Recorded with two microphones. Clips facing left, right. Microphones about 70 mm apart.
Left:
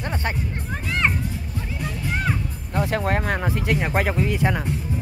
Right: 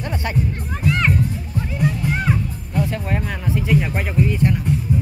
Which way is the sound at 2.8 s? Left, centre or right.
Left.